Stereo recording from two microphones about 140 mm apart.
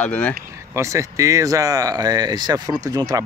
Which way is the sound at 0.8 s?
20° right (ahead or behind).